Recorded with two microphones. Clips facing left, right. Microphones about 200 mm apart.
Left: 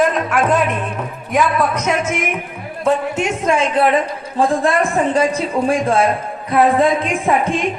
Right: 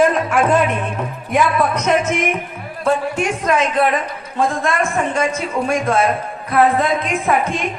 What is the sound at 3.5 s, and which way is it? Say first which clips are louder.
A man's voice: left 2 dB; 30° left (ahead or behind).